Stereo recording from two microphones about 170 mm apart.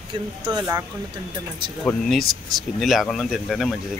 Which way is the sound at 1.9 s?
5° left (ahead or behind).